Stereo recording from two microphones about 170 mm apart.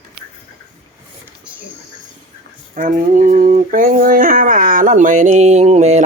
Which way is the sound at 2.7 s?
50° right (ahead or behind).